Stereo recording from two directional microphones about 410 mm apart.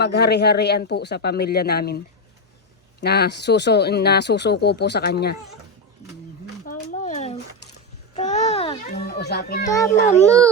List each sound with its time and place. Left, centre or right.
0.0 s speech: left
3.0 s speech: left
6.7 s a sound: centre
8.9 s speech: left
9.6 s a child's voice: centre